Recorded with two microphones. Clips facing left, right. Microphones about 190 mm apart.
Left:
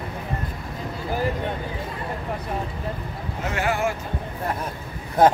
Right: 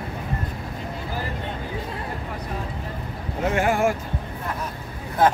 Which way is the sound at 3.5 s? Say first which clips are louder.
Right 3 dB; 50° right (ahead or behind).